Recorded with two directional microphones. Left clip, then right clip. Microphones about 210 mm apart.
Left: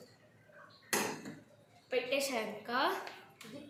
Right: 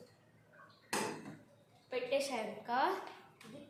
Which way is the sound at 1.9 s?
15° right (ahead or behind).